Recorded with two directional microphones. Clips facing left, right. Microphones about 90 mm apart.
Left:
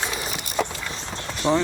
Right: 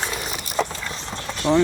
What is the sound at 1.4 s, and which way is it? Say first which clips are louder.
Speech: right 2 dB; 25° left (ahead or behind).